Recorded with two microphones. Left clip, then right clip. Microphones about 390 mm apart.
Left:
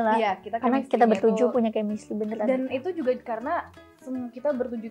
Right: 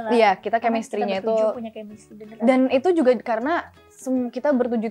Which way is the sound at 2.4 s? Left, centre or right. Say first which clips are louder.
Right 11 dB; right.